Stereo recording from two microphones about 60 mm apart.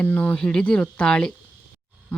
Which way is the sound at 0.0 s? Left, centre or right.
Left.